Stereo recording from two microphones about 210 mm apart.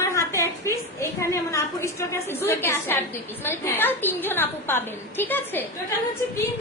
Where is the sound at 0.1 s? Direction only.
15° left (ahead or behind).